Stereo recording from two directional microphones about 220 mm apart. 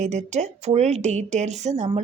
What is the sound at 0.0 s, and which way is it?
A woman's voice, 30° right (ahead or behind).